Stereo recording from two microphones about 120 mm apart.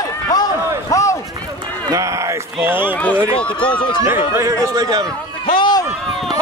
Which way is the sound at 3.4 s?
10° left (ahead or behind).